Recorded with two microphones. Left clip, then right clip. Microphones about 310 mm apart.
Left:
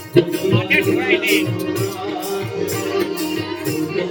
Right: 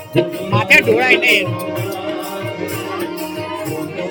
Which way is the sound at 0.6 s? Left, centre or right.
Centre.